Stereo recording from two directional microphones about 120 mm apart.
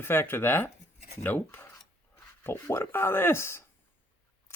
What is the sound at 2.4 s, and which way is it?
Speech, 20° left (ahead or behind).